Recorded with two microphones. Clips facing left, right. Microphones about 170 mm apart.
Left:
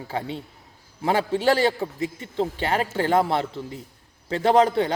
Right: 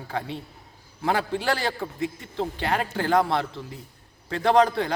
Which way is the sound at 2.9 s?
25° left (ahead or behind).